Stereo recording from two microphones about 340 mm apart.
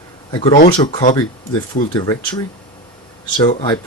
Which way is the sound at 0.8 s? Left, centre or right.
Centre.